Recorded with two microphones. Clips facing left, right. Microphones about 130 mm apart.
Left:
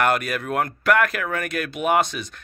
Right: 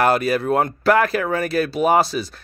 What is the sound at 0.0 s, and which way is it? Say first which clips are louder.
Speech: right 4 dB; 30° right (ahead or behind).